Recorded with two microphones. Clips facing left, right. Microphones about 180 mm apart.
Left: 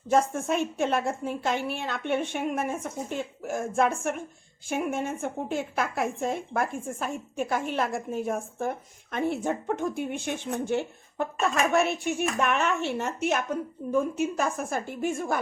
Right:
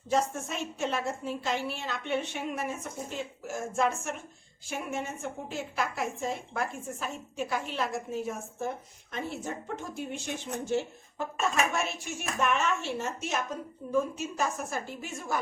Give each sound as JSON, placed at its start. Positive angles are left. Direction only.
{"t": 0.1, "sound": "a woman's voice", "side_deg": 55}